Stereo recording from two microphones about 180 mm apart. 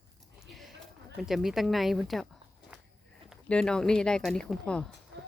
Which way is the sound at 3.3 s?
5° left (ahead or behind).